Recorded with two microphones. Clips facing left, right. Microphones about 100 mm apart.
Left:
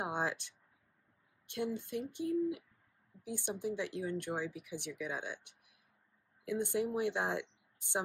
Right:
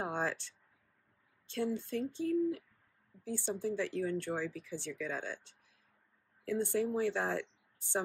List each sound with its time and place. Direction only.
0.0 s speech: 15° left (ahead or behind)